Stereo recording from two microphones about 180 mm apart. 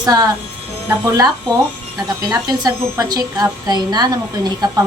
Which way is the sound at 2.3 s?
20° right (ahead or behind).